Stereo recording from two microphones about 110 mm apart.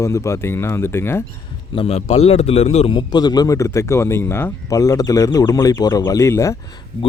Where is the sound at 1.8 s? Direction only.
70° left (ahead or behind).